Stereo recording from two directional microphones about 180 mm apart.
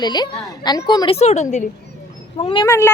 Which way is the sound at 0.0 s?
25° left (ahead or behind).